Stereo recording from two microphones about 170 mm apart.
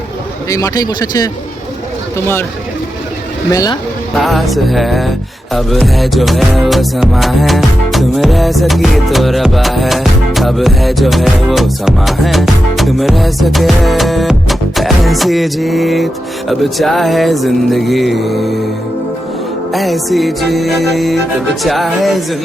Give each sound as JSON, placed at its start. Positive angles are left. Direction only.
{"t": 0.5, "sound": "speech", "side_deg": 20}
{"t": 3.5, "sound": "speech", "side_deg": 20}
{"t": 4.2, "sound": "music", "side_deg": 0}
{"t": 19.7, "sound": "music", "side_deg": 0}